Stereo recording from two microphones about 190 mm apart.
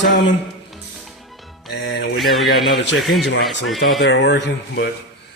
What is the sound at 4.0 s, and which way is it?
Speech, 65° left (ahead or behind).